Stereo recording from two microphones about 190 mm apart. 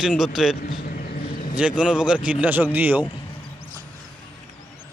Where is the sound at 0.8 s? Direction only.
50° left (ahead or behind).